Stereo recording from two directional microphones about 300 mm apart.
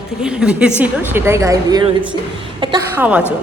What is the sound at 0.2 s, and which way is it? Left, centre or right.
A woman's voice, centre.